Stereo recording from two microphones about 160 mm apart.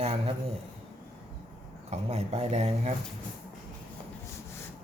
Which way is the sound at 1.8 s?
45° right (ahead or behind).